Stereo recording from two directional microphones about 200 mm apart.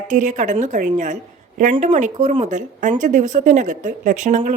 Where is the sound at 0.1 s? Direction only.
40° right (ahead or behind).